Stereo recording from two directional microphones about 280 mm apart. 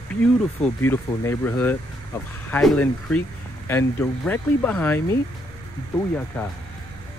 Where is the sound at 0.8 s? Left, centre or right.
Centre.